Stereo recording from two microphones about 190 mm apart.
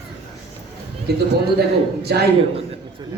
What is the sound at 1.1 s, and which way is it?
A woman's voice, 60° right (ahead or behind).